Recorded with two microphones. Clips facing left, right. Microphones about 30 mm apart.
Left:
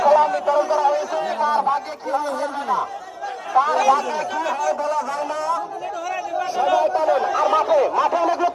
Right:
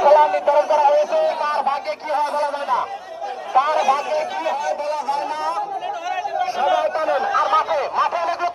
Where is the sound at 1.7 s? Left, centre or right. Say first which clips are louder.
Right 1 dB; right.